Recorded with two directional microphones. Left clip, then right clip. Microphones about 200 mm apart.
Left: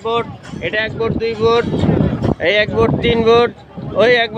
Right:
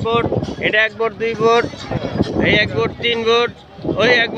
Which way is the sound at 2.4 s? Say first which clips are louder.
Left 2 dB; 20° left (ahead or behind).